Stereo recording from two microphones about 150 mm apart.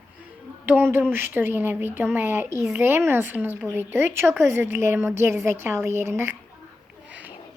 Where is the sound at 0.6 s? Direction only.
10° right (ahead or behind).